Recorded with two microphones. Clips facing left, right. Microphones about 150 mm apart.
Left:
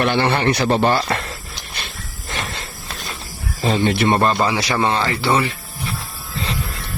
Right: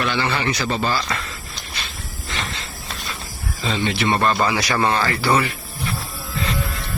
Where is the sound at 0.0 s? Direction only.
55° left (ahead or behind).